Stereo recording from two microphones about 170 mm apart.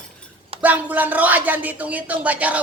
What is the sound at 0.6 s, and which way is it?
Speech, 10° right (ahead or behind).